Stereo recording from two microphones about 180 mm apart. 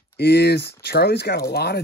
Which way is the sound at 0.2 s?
65° left (ahead or behind).